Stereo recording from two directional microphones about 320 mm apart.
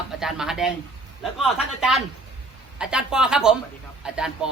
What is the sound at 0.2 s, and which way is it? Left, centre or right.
A man's voice, centre.